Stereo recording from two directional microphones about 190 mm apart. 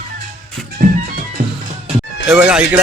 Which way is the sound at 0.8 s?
45° right (ahead or behind).